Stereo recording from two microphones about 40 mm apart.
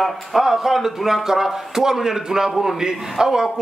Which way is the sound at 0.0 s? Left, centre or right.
Centre.